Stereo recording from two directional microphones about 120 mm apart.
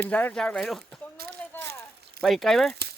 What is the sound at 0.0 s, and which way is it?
Speech, 15° left (ahead or behind).